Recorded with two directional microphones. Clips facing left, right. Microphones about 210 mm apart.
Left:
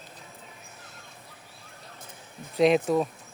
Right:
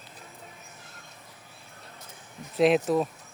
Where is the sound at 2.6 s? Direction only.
Centre (ahead or behind).